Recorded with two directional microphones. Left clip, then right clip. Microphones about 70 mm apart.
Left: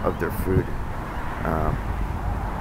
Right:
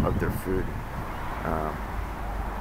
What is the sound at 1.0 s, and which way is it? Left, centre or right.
Vehicle, right.